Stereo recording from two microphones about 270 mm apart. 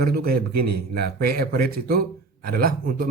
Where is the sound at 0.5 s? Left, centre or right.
Right.